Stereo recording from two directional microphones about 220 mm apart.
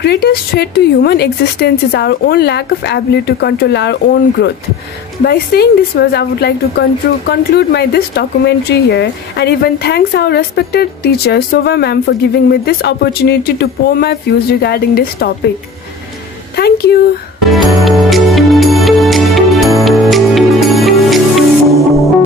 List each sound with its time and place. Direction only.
0.0 s speech: 45° left (ahead or behind)
16.5 s a sound: 45° left (ahead or behind)
17.6 s music: centre (ahead or behind)